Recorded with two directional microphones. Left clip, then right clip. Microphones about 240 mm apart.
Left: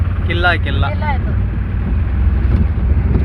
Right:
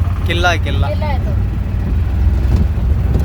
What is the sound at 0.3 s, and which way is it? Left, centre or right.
Speech, centre.